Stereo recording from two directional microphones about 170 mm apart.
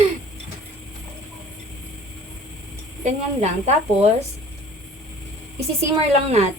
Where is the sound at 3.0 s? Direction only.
40° right (ahead or behind).